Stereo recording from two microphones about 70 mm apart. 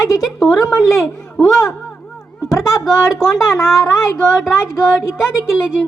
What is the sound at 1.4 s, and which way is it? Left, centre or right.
A woman's voice, left.